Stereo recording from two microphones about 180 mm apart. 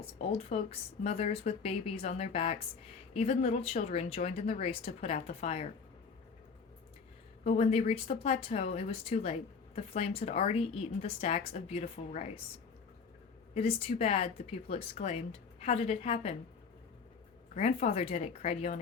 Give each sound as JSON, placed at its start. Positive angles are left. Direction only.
{"t": 0.3, "sound": "speech", "side_deg": 35}
{"t": 7.4, "sound": "speech", "side_deg": 40}
{"t": 13.5, "sound": "speech", "side_deg": 35}
{"t": 17.5, "sound": "speech", "side_deg": 40}